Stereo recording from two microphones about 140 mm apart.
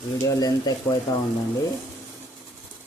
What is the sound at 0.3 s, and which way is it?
Speech, 30° left (ahead or behind).